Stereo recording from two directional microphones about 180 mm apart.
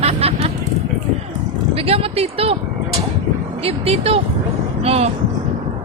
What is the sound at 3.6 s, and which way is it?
Speech, 35° right (ahead or behind).